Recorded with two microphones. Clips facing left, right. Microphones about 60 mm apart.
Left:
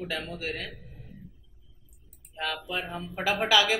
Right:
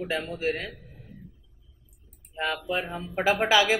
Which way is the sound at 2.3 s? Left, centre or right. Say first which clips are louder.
Right 3 dB; right.